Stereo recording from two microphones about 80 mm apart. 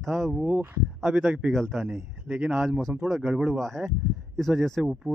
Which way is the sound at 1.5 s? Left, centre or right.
Centre.